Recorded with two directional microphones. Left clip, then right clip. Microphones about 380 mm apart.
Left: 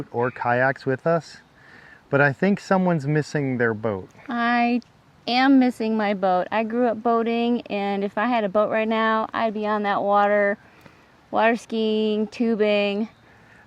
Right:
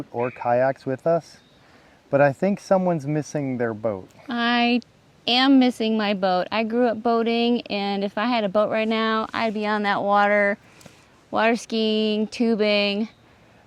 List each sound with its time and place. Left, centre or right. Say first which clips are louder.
0.1 s speech: even; left
4.3 s speech: even; centre